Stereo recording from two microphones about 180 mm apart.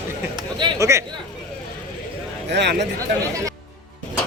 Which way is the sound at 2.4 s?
70° right (ahead or behind).